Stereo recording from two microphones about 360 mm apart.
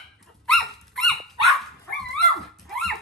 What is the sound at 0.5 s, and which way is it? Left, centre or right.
Dog, centre.